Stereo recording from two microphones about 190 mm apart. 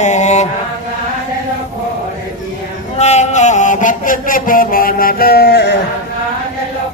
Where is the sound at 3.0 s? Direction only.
35° left (ahead or behind); by 5.8 s 60° left (ahead or behind).